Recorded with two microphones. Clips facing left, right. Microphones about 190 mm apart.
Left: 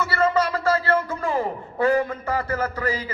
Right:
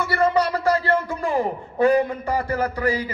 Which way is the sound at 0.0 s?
15° right (ahead or behind).